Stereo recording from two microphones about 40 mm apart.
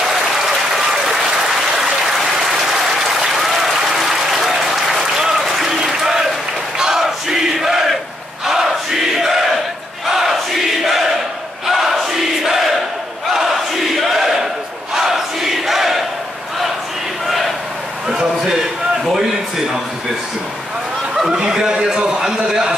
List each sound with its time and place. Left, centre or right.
0.0 s applause: centre
6.8 s crowd: centre
10.0 s battle cry: centre
11.6 s crowd: centre
13.9 s battle cry: centre
15.0 s crowd: centre
18.1 s a sound: centre
21.3 s a sound: centre